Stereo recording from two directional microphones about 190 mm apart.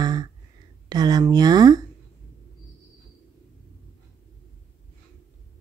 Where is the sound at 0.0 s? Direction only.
20° right (ahead or behind).